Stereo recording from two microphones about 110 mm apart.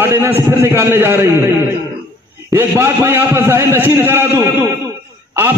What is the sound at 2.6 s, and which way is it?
A man's voice, 20° right (ahead or behind).